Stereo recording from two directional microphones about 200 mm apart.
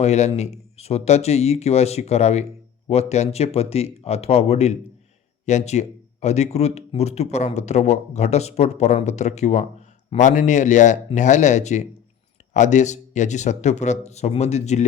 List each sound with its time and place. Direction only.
0.0 s speech: 35° left (ahead or behind)